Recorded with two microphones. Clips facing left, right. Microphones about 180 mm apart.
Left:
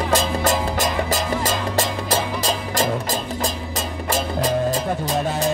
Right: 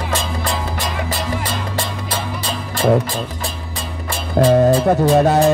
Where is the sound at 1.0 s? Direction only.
45° left (ahead or behind).